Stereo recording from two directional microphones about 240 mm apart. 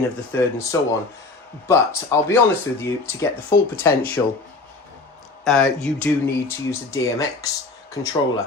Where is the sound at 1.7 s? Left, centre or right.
Centre.